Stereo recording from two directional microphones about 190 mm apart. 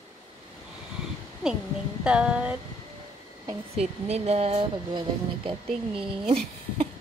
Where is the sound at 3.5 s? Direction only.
35° right (ahead or behind).